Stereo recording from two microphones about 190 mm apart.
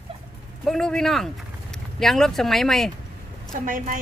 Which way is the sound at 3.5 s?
45° right (ahead or behind).